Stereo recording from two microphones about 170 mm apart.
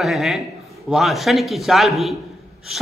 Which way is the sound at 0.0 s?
Centre (ahead or behind).